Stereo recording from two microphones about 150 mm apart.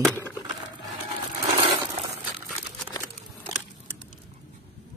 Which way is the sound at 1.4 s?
55° right (ahead or behind).